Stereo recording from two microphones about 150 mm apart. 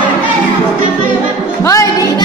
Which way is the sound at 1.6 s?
20° left (ahead or behind).